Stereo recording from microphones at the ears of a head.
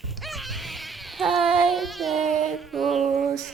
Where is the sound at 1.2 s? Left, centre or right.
Right.